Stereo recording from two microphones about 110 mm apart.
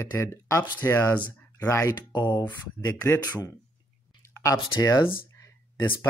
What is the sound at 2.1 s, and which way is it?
Speech, 40° left (ahead or behind).